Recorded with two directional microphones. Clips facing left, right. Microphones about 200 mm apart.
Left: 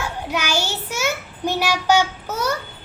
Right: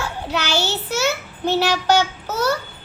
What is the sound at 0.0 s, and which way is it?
A child's voice, 10° left (ahead or behind).